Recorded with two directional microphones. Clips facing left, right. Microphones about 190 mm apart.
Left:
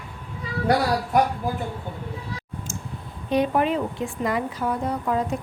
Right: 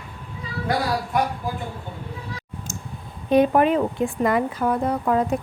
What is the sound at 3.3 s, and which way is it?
A woman's voice, 50° right (ahead or behind).